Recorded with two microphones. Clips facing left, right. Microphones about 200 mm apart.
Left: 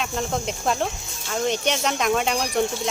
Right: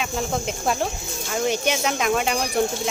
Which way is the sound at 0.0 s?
5° right (ahead or behind).